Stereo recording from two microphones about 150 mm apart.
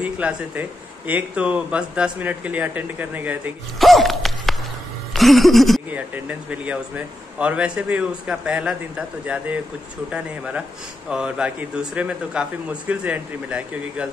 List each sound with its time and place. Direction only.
0.0 s speech: 10° right (ahead or behind)
3.8 s a sound: centre (ahead or behind)
5.9 s speech: 10° right (ahead or behind)